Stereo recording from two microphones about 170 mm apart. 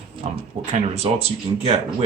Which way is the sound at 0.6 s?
45° right (ahead or behind).